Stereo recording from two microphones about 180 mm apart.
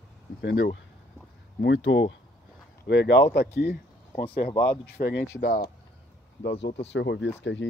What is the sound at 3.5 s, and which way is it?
Speech, 65° left (ahead or behind).